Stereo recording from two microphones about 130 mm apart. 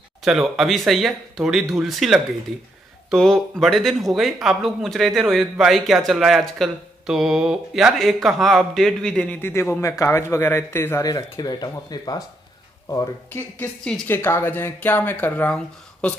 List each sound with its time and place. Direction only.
0.2 s speech: 5° right (ahead or behind); by 12.2 s 30° left (ahead or behind)
13.3 s speech: 15° left (ahead or behind)